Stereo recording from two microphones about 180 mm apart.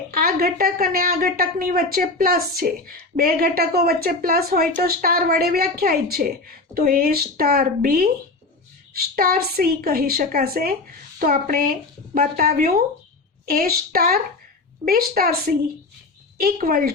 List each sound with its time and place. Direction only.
0.1 s a woman's voice: 55° right (ahead or behind)